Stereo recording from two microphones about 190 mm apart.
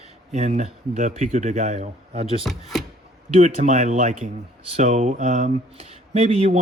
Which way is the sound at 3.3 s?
40° right (ahead or behind).